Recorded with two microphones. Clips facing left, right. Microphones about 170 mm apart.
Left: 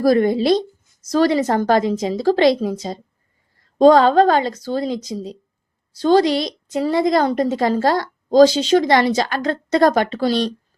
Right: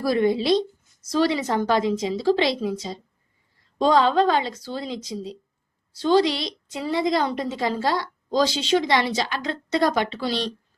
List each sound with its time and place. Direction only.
0.0 s a woman's voice: 45° left (ahead or behind)